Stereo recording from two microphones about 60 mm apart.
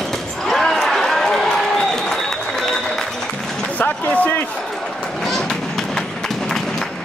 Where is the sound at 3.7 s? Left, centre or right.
Left.